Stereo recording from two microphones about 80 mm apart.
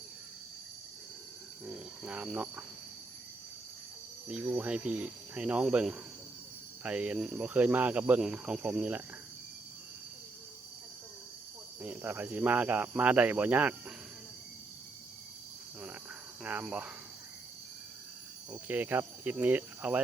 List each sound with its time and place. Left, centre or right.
1.6 s cricket: centre
4.3 s speech: centre
6.8 s speech: centre
11.8 s speech: right
16.4 s speech: right
18.5 s speech: right